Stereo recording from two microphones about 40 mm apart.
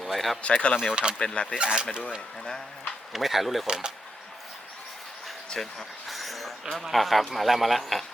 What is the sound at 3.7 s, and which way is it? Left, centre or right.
Speech, centre.